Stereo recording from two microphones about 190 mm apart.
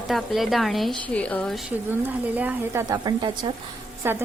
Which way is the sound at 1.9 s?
10° right (ahead or behind).